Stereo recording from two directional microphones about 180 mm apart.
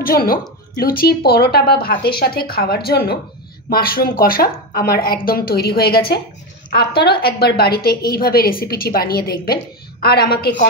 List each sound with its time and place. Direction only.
0.0 s a woman's voice: 55° left (ahead or behind)